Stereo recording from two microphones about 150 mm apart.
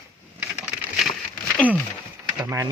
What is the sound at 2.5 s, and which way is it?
Speech, 20° right (ahead or behind).